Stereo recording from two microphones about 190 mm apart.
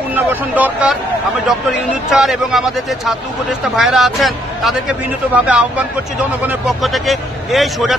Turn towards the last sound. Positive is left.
turn(degrees=0)  # may be behind; listen again after turning